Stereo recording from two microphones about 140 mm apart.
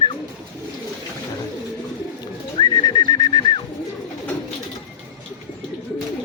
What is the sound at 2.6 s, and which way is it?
Bird, 30° left (ahead or behind).